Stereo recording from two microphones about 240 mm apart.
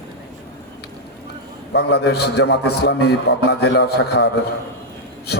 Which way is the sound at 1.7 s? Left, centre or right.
Left.